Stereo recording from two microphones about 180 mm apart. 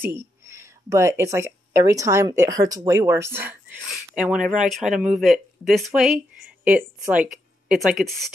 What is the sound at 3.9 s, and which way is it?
Speech, 5° right (ahead or behind).